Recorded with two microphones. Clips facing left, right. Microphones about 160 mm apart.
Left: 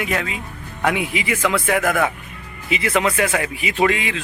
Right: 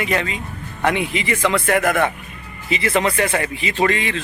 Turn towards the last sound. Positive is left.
turn(degrees=5)  # may be behind; listen again after turning